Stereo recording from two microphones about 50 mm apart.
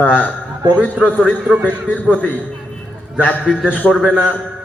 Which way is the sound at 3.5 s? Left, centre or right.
Centre.